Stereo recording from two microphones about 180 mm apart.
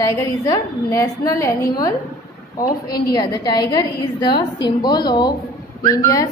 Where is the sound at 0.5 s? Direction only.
20° left (ahead or behind).